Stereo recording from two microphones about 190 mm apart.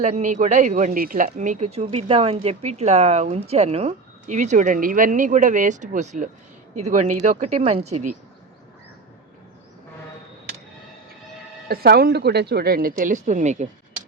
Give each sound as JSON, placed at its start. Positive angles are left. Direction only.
{"t": 0.0, "sound": "speech", "side_deg": -40}
{"t": 11.7, "sound": "speech", "side_deg": -55}